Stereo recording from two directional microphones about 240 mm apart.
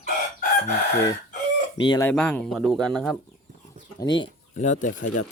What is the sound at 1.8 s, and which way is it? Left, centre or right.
Speech, centre.